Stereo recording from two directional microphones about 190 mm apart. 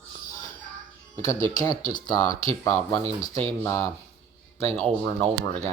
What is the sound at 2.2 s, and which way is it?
Speech, 30° right (ahead or behind).